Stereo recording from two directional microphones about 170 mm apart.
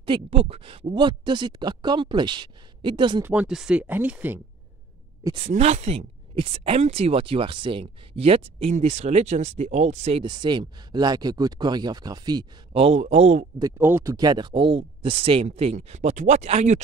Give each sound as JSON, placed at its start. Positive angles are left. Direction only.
{"t": 0.0, "sound": "speech", "side_deg": -30}
{"t": 3.3, "sound": "speech", "side_deg": -5}
{"t": 5.4, "sound": "speech", "side_deg": -40}
{"t": 10.2, "sound": "speech", "side_deg": -25}
{"t": 12.8, "sound": "speech", "side_deg": -40}
{"t": 13.6, "sound": "speech", "side_deg": -15}